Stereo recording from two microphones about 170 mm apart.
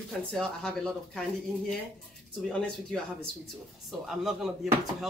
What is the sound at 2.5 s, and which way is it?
Speech, 5° left (ahead or behind).